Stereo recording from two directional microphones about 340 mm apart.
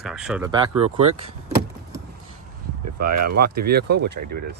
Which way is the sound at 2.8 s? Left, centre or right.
Right.